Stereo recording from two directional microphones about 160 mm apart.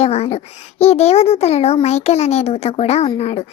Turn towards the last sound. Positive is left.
turn(degrees=40)  # may be behind; listen again after turning